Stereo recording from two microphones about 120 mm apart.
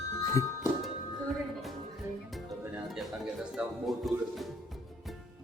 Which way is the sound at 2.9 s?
Centre (ahead or behind).